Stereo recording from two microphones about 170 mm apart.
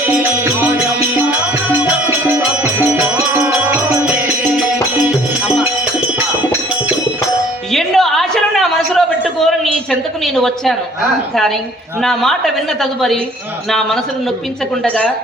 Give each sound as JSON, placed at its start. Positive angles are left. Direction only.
{"t": 1.8, "sound": "music", "side_deg": -15}
{"t": 6.1, "sound": "music", "side_deg": -10}
{"t": 7.7, "sound": "a sound", "side_deg": 0}
{"t": 12.0, "sound": "a woman's voice", "side_deg": 0}